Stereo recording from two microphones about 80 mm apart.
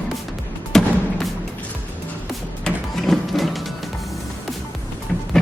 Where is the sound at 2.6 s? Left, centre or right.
Centre.